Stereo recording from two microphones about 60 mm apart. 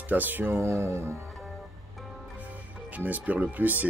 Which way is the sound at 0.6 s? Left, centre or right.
Right.